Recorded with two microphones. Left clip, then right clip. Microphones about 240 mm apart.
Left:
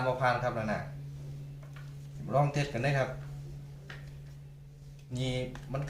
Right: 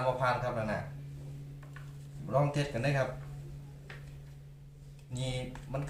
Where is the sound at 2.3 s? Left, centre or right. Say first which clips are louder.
Left 1 dB; centre.